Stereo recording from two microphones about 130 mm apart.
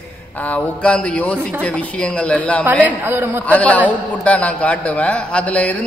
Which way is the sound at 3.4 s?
10° left (ahead or behind).